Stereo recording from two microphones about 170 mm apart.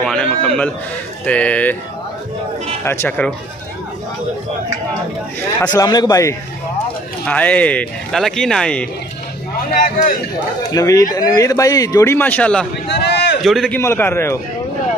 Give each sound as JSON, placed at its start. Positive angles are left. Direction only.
{"t": 0.0, "sound": "speech", "side_deg": 5}
{"t": 2.8, "sound": "speech", "side_deg": 15}
{"t": 5.6, "sound": "speech", "side_deg": 20}
{"t": 7.2, "sound": "speech", "side_deg": 10}
{"t": 9.8, "sound": "a man's voice", "side_deg": 55}
{"t": 10.7, "sound": "speech", "side_deg": 20}
{"t": 12.8, "sound": "a sound", "side_deg": 90}
{"t": 13.4, "sound": "a man's voice", "side_deg": 0}
{"t": 13.7, "sound": "speech", "side_deg": 15}